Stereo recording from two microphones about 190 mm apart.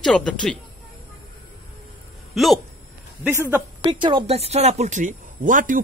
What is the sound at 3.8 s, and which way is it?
Speech, 25° right (ahead or behind).